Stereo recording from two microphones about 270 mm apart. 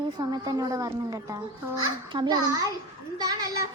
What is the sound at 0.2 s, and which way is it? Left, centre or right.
A child's voice, centre.